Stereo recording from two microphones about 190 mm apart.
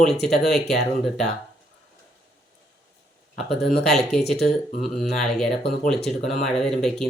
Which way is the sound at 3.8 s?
Centre (ahead or behind).